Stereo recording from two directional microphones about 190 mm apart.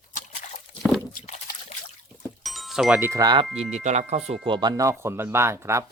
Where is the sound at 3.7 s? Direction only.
35° right (ahead or behind); by 5.9 s 15° right (ahead or behind).